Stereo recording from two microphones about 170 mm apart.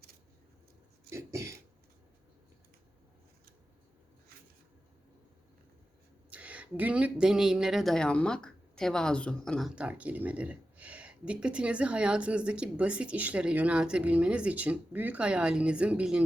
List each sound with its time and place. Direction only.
1.1 s throat clearing: 15° right (ahead or behind)
6.3 s speech: 10° right (ahead or behind)